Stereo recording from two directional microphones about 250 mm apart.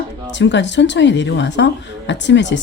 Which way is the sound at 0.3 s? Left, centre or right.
Left.